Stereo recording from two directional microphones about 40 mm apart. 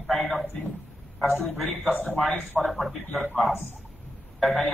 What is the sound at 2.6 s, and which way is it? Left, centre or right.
Speech, centre.